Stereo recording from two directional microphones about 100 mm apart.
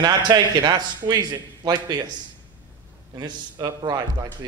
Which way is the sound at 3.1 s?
40° right (ahead or behind).